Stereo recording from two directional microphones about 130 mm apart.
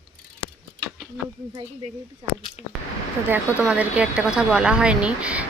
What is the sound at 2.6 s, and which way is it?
Speech, 50° left (ahead or behind).